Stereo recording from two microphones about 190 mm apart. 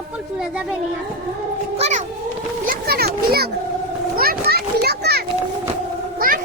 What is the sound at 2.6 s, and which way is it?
Children playing, 55° right (ahead or behind).